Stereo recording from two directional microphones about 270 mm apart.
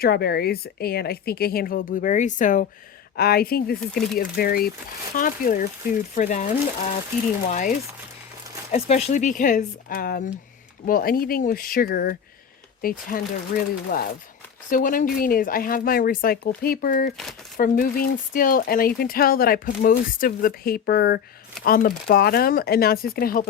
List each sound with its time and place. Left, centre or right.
0.0 s speech: left